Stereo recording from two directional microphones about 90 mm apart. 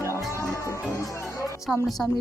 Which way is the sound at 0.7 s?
35° left (ahead or behind).